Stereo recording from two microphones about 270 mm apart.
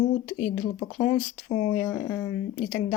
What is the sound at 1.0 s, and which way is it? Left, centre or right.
Speech, centre.